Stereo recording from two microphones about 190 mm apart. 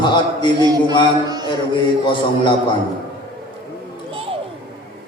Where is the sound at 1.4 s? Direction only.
25° left (ahead or behind).